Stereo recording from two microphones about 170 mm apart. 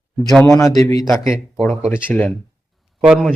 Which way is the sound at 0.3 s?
Centre (ahead or behind).